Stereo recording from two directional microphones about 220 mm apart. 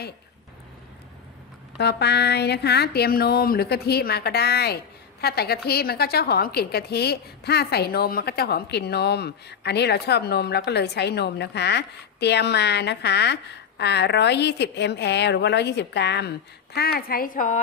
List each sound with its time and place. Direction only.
1.8 s a woman's voice: 50° left (ahead or behind)